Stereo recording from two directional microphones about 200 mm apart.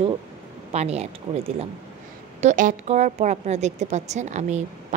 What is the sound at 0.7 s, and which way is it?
Speech, 30° right (ahead or behind).